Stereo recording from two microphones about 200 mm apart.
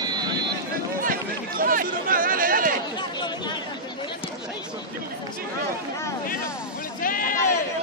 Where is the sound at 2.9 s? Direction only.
20° left (ahead or behind).